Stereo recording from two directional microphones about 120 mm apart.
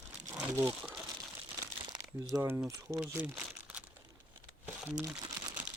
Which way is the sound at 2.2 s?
25° right (ahead or behind).